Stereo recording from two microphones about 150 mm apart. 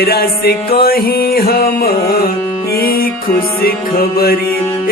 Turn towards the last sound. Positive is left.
turn(degrees=90)